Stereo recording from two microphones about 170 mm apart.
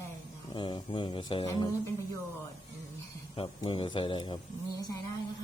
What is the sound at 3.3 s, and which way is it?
Speech, 30° left (ahead or behind).